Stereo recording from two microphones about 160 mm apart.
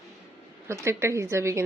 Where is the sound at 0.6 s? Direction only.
15° right (ahead or behind).